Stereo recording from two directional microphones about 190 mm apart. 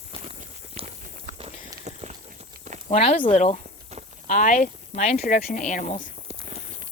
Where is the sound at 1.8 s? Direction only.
35° right (ahead or behind).